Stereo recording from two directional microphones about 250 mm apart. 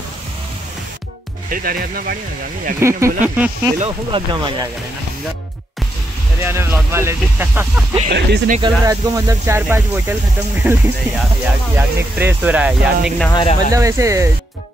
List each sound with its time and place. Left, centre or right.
1.5 s speech: right
2.8 s speech: centre
3.8 s speech: centre
6.4 s speech: centre
8.1 s speech: right
8.5 s speech: centre
13.3 s speech: centre
13.7 s speech: centre